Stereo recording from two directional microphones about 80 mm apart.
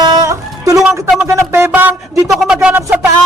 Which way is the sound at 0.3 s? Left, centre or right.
Right.